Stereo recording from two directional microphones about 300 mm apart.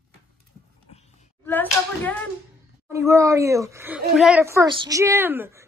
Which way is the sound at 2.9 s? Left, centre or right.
Centre.